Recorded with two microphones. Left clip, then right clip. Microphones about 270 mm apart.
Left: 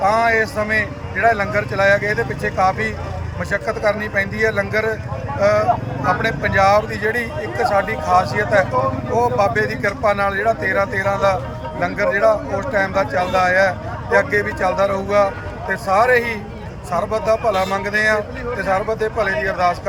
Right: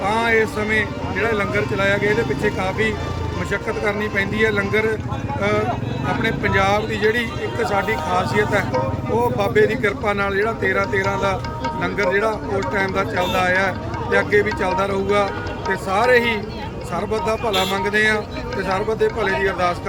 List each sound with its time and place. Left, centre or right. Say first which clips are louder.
0.0 s speech: left 3 dB; centre